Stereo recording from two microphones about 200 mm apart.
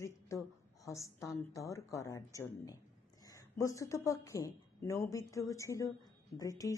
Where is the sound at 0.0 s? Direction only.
15° left (ahead or behind).